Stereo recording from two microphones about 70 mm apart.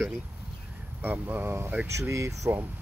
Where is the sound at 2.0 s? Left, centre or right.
Right.